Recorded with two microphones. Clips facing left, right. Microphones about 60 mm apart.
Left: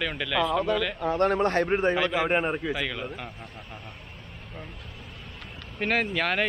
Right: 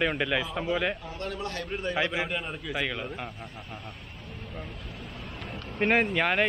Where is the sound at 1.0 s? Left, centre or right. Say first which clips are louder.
Left 12 dB; left.